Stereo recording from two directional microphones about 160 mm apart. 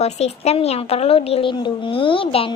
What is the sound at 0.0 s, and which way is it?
A child's voice, 40° left (ahead or behind).